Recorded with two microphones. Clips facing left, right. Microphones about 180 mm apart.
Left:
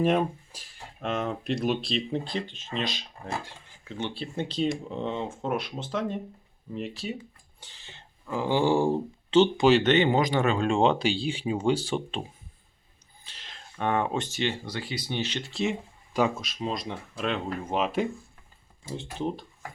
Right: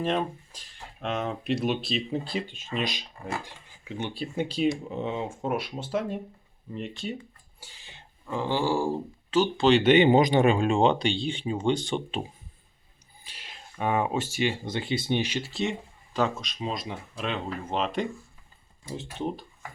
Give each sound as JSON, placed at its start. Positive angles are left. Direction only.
{"t": 0.0, "sound": "speech", "side_deg": 10}
{"t": 6.7, "sound": "speech", "side_deg": 0}
{"t": 7.6, "sound": "a sound", "side_deg": -10}
{"t": 8.3, "sound": "speech", "side_deg": 10}
{"t": 9.8, "sound": "speech", "side_deg": -15}
{"t": 10.7, "sound": "speech", "side_deg": 0}
{"t": 13.2, "sound": "speech", "side_deg": -10}
{"t": 14.7, "sound": "speech", "side_deg": -25}
{"t": 15.2, "sound": "speech", "side_deg": -10}
{"t": 16.1, "sound": "speech", "side_deg": 10}
{"t": 16.6, "sound": "speech", "side_deg": 0}